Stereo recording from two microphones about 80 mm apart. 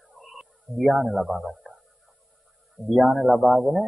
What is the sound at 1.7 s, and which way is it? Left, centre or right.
Music, centre.